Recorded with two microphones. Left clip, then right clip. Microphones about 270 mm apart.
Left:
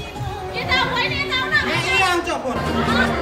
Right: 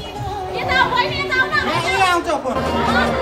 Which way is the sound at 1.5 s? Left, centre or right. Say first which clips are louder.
Right 1 dB; centre.